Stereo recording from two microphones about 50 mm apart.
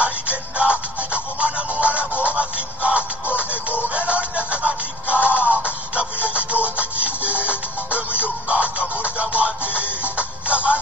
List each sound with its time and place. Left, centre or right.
0.0 s music: right
4.1 s music: right